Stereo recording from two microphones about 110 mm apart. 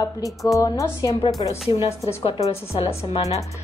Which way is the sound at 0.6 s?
30° left (ahead or behind).